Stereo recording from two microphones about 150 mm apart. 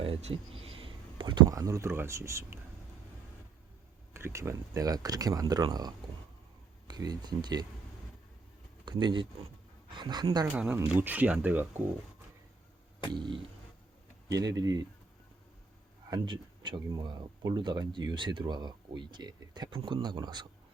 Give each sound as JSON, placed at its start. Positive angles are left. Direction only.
{"t": 0.0, "sound": "speech", "side_deg": -40}
{"t": 4.1, "sound": "speech", "side_deg": -20}
{"t": 8.8, "sound": "a woman's voice", "side_deg": -30}
{"t": 10.4, "sound": "speech", "side_deg": -10}
{"t": 13.1, "sound": "a woman's voice", "side_deg": -30}
{"t": 16.0, "sound": "speech", "side_deg": -30}